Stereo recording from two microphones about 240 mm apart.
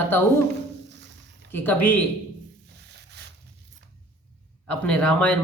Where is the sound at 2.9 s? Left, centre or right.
Right.